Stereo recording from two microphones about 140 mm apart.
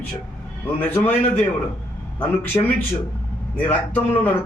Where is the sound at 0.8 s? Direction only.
15° left (ahead or behind).